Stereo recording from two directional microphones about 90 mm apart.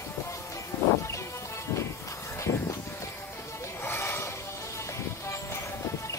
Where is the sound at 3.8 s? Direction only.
25° left (ahead or behind).